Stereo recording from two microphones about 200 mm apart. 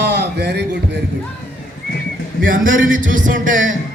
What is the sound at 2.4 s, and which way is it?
A man's voice, 45° right (ahead or behind).